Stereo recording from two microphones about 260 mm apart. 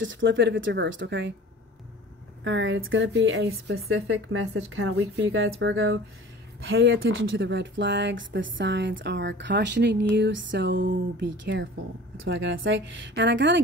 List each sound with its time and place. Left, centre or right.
0.0 s speech: right
2.4 s speech: right
3.9 s speech: right